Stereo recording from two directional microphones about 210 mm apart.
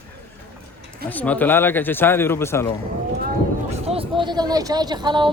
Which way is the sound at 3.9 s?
25° right (ahead or behind).